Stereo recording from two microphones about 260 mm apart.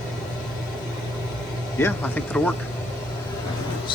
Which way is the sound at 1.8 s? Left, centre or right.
Centre.